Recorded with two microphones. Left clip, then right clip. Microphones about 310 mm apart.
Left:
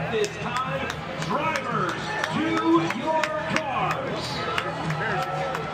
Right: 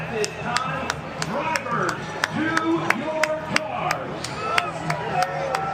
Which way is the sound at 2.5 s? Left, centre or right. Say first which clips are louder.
Left 1 dB; centre.